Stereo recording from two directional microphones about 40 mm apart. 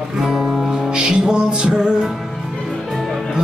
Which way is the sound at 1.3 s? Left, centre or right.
Right.